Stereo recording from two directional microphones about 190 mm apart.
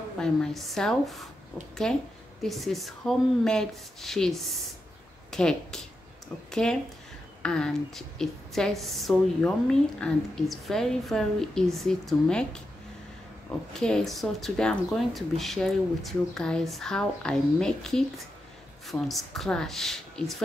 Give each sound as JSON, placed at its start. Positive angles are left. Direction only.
{"t": 0.2, "sound": "a woman's voice", "side_deg": 0}
{"t": 13.7, "sound": "a woman's voice", "side_deg": 5}